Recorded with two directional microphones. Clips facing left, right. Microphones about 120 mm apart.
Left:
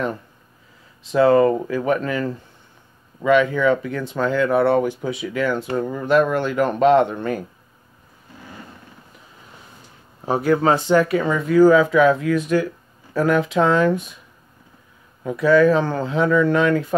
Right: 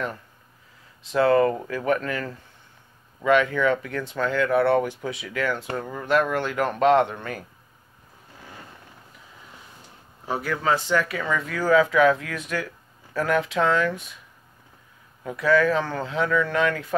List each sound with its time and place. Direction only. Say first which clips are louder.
1.1 s speech: left 5 dB; 20° left (ahead or behind)
10.2 s speech: left 8 dB; 30° left (ahead or behind)
15.2 s speech: left 6 dB; 25° left (ahead or behind)